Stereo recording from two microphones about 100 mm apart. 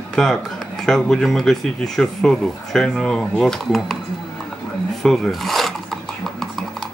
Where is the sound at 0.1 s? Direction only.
5° left (ahead or behind).